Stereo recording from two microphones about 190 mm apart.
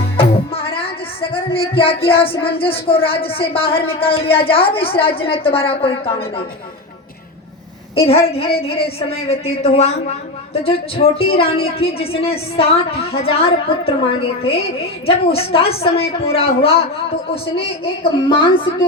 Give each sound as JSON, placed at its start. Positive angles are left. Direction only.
{"t": 0.2, "sound": "music", "side_deg": 30}
{"t": 1.3, "sound": "speech", "side_deg": 30}
{"t": 7.9, "sound": "a woman's voice", "side_deg": 30}
{"t": 18.3, "sound": "speech", "side_deg": 25}